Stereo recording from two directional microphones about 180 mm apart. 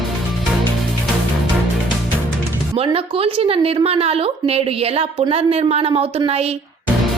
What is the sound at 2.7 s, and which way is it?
A woman's voice, 30° right (ahead or behind).